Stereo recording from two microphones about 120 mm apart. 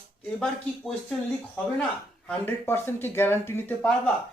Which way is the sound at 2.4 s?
20° left (ahead or behind).